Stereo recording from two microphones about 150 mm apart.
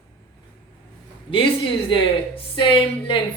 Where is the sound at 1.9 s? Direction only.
35° left (ahead or behind).